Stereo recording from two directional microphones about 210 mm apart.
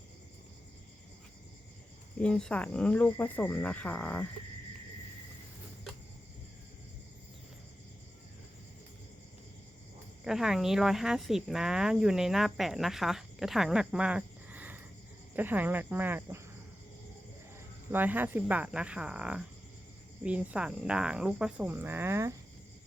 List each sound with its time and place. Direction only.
2.1 s speech: 5° left (ahead or behind)
10.2 s speech: centre (ahead or behind)
17.9 s speech: 10° right (ahead or behind)